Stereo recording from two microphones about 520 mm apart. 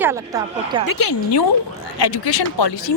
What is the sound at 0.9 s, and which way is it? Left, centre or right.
Speech, left.